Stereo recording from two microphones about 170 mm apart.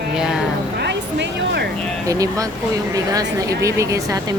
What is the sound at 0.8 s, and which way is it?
Speech, 85° right.